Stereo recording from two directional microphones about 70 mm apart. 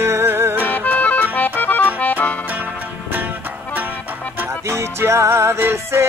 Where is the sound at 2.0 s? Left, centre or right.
Left.